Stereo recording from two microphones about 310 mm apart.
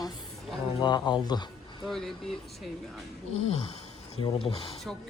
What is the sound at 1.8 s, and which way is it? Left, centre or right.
A man's voice, centre.